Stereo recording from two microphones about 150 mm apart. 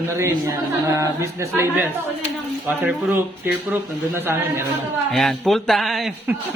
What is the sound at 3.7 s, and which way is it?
Speech, 15° right (ahead or behind).